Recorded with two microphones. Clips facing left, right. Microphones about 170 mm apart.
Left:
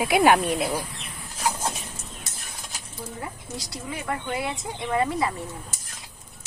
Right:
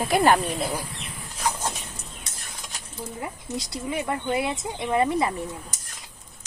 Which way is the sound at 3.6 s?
20° right (ahead or behind).